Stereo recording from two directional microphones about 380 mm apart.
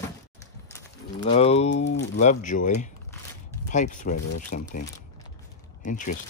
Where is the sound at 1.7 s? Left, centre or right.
Left.